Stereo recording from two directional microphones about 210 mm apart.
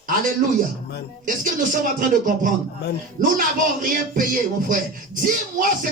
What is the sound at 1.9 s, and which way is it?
A man's voice, 40° right (ahead or behind).